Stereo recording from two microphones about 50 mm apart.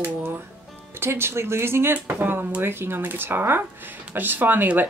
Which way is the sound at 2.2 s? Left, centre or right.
Right.